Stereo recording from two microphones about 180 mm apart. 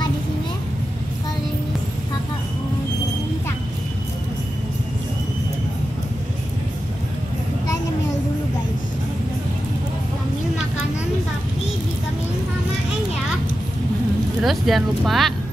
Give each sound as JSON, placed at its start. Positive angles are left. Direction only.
{"t": 14.4, "sound": "speech", "side_deg": 0}